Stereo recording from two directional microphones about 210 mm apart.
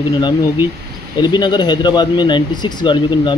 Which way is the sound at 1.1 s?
20° left (ahead or behind).